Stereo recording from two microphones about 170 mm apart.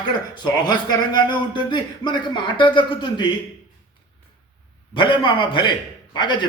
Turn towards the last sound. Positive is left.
turn(degrees=25)  # may be behind; listen again after turning